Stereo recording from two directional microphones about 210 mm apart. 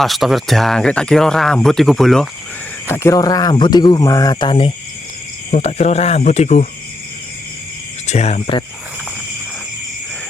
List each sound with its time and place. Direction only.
0.0 s speech: centre (ahead or behind)
2.8 s speech: 10° left (ahead or behind); by 6.7 s 30° left (ahead or behind)
8.0 s speech: 30° left (ahead or behind)